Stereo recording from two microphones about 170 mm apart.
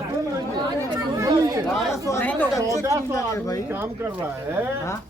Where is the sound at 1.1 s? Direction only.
20° right (ahead or behind).